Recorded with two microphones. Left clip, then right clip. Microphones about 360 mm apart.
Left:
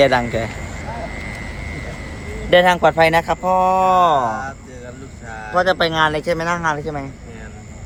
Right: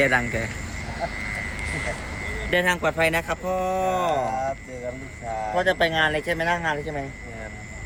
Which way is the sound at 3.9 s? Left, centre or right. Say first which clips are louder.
Left 9 dB; centre.